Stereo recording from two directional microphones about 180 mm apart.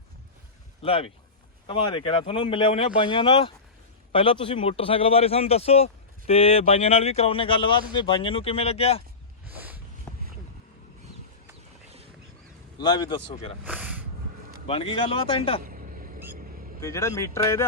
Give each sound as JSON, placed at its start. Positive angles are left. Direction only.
{"t": 0.8, "sound": "a man's voice", "side_deg": 30}
{"t": 9.5, "sound": "a sound", "side_deg": -10}
{"t": 12.8, "sound": "speech", "side_deg": 25}
{"t": 13.7, "sound": "a sound", "side_deg": -10}
{"t": 14.7, "sound": "a man's voice", "side_deg": 30}
{"t": 15.6, "sound": "vehicle", "side_deg": -50}
{"t": 16.8, "sound": "speech", "side_deg": 15}